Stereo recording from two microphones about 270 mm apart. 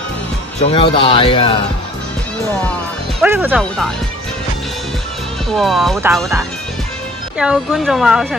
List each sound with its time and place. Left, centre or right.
0.6 s speech: left
3.2 s speech: centre
5.5 s speech: centre